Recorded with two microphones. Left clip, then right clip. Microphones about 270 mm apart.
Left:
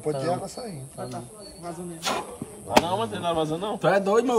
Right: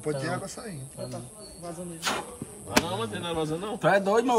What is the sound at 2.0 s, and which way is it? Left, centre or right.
Speech, centre.